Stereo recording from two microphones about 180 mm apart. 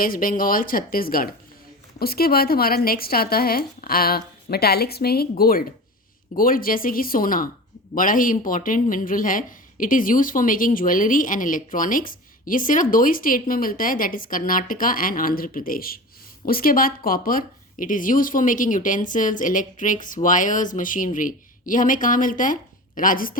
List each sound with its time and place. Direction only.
0.0 s a woman's voice: 50° left (ahead or behind)